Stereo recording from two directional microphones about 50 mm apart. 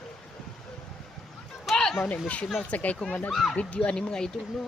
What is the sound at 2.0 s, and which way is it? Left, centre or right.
Speech, left.